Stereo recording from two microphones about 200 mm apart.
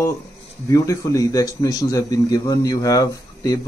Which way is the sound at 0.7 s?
15° left (ahead or behind).